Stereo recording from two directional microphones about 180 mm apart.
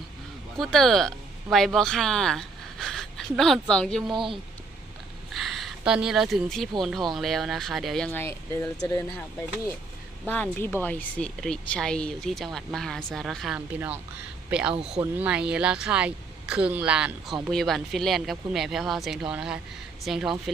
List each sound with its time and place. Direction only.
0.5 s speech: centre (ahead or behind)
4.1 s speech: 25° right (ahead or behind)
5.3 s a sound: centre (ahead or behind)
7.2 s speech: centre (ahead or behind)
8.2 s speech: 15° left (ahead or behind)
10.2 s speech: 10° left (ahead or behind)